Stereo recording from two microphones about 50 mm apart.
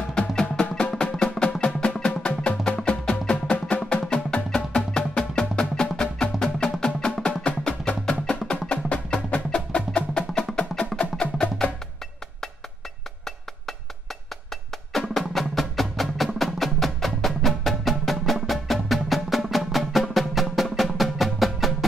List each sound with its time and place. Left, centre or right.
0.3 s music: centre
8.5 s wood block: left
14.9 s music: centre